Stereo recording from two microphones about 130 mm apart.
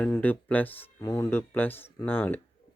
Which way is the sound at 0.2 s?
15° left (ahead or behind).